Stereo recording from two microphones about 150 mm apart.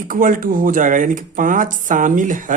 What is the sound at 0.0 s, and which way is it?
Speech, 65° right (ahead or behind).